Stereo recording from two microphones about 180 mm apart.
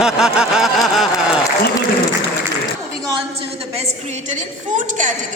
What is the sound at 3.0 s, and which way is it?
Music, 30° right (ahead or behind).